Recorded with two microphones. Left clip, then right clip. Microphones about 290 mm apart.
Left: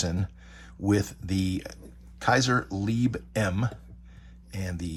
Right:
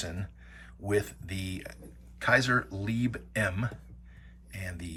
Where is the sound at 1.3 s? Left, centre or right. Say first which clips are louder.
Left 8 dB; centre.